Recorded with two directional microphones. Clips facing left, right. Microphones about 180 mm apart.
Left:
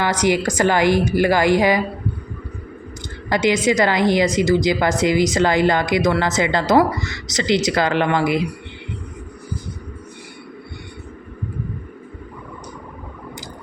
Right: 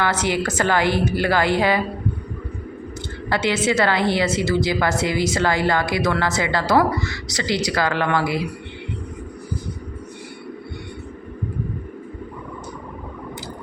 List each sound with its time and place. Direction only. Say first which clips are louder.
0.0 s a woman's voice: left 3 dB; 15° left (ahead or behind)
3.2 s a woman's voice: left 3 dB; 15° left (ahead or behind)